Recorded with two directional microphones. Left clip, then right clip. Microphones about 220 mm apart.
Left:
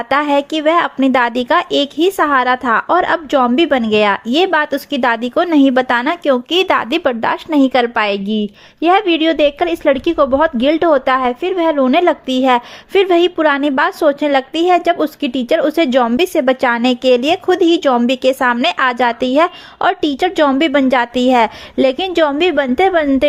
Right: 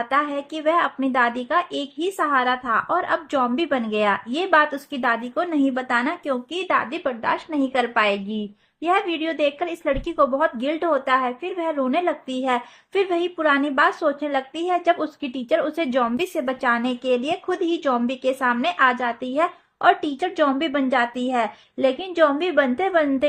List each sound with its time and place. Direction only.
0.1 s a woman's voice: 45° left (ahead or behind)